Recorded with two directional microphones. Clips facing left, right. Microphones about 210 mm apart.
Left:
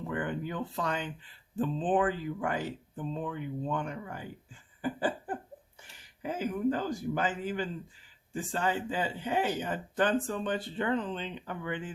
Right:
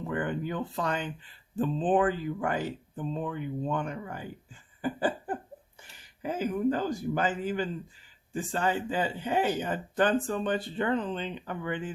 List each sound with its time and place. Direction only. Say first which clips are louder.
0.1 s speech: right 3 dB; 45° right (ahead or behind)
4.8 s a sound: right 2 dB; 40° right (ahead or behind)
6.2 s speech: right 2 dB; 40° right (ahead or behind)